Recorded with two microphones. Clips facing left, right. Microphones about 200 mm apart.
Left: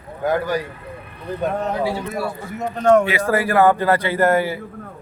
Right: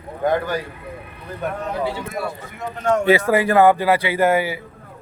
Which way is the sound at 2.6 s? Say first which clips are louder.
Left 6 dB; 50° left (ahead or behind).